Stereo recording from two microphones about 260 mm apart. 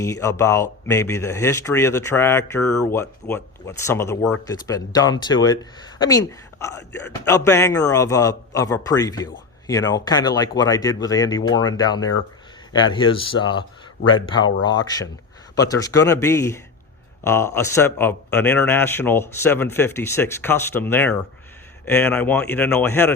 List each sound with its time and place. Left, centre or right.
0.0 s speech: centre